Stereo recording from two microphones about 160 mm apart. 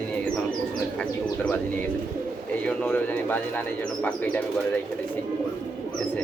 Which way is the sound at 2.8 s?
10° left (ahead or behind).